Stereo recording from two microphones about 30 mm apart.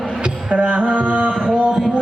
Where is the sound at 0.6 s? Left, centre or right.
Right.